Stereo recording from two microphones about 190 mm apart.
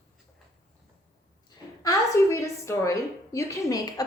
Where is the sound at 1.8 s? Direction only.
15° left (ahead or behind).